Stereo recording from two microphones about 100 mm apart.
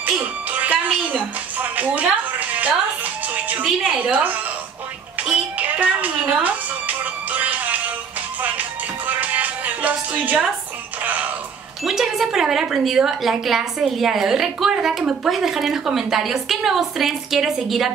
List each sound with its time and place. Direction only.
0.0 s music: 15° right (ahead or behind)
3.6 s a woman's voice: 5° right (ahead or behind)
5.2 s music: 15° right (ahead or behind)
11.8 s a woman's voice: 5° right (ahead or behind)